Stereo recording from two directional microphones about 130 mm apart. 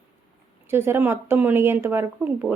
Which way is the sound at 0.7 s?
15° right (ahead or behind).